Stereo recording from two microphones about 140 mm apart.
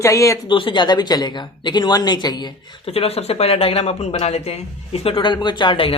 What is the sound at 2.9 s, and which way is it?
Speech, 45° left (ahead or behind).